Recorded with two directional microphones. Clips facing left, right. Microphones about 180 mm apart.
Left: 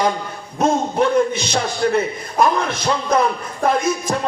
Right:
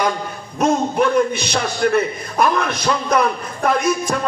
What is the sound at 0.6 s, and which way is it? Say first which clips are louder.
A man's voice: even; 25° left (ahead or behind).